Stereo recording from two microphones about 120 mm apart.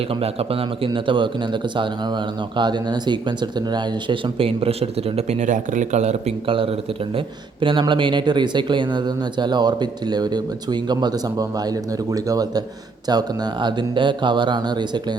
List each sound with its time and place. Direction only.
0.2 s speech: 55° right (ahead or behind)
2.6 s speech: 35° right (ahead or behind); by 6.3 s 70° right (ahead or behind)
6.5 s speech: 50° right (ahead or behind)